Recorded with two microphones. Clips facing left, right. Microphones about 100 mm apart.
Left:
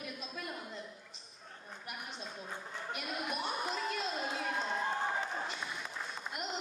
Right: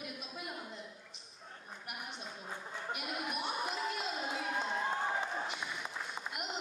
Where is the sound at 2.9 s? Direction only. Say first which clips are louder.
Left 1 dB; 10° right (ahead or behind).